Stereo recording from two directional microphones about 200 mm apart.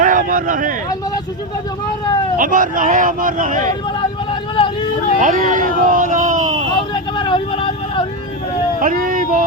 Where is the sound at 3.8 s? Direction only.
20° left (ahead or behind).